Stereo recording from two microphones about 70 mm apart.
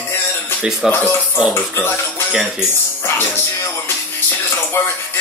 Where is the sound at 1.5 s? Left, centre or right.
Left.